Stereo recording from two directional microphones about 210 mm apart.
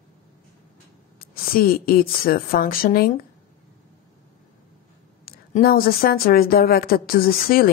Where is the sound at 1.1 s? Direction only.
45° left (ahead or behind).